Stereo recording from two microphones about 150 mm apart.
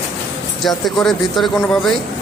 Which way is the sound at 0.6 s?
Centre (ahead or behind).